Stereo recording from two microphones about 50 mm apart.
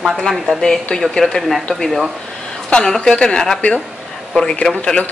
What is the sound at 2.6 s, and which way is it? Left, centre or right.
A woman's voice, centre.